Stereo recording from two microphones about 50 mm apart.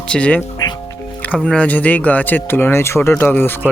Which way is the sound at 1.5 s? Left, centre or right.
Left.